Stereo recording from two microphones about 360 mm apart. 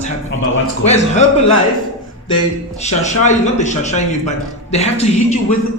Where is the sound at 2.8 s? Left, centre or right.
Centre.